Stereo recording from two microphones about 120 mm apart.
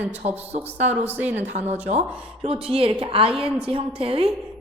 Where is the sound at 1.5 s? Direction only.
65° right (ahead or behind).